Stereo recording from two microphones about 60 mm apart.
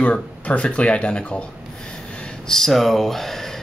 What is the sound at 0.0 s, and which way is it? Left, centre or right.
Speech, left.